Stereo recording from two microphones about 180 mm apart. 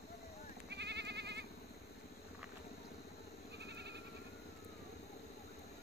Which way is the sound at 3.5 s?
70° right (ahead or behind).